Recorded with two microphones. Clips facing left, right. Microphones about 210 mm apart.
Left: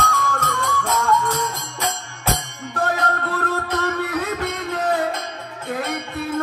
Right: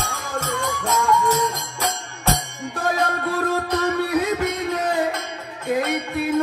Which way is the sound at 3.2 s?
15° right (ahead or behind).